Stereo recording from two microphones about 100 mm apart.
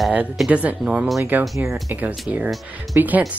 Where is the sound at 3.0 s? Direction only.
15° right (ahead or behind).